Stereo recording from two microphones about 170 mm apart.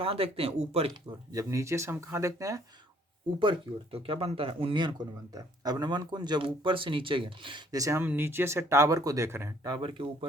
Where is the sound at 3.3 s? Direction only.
30° right (ahead or behind).